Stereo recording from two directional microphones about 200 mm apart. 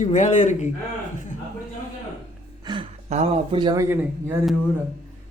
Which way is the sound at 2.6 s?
25° right (ahead or behind).